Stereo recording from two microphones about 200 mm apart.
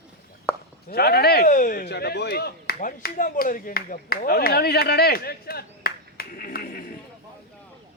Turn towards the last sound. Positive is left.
turn(degrees=50)  # may be behind; listen again after turning